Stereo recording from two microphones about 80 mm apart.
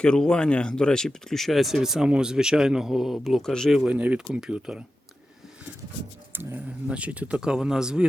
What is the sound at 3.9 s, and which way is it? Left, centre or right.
Speech, centre.